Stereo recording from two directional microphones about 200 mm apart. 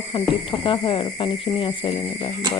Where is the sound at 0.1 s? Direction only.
25° left (ahead or behind).